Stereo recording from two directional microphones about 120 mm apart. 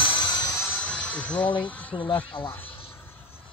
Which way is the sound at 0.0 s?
45° left (ahead or behind).